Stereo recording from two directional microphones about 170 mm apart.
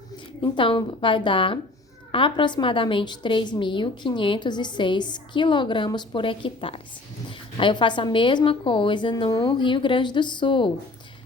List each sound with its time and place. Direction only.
0.4 s a woman's voice: 30° left (ahead or behind)